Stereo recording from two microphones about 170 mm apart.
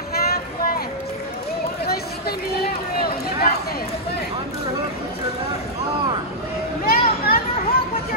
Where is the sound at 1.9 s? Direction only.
65° left (ahead or behind).